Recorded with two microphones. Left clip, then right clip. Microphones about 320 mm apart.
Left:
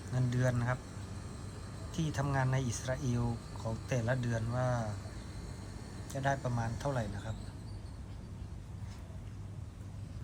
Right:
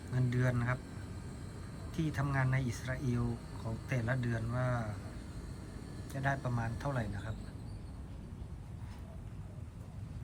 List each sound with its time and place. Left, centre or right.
0.1 s speech: centre
1.9 s speech: centre
6.1 s speech: centre